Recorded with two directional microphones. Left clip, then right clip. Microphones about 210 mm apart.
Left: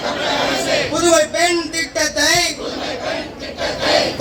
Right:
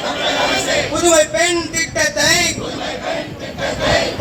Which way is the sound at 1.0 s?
50° left (ahead or behind).